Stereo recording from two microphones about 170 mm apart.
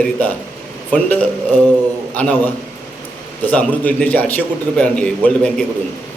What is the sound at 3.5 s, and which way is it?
A man's voice, 10° left (ahead or behind).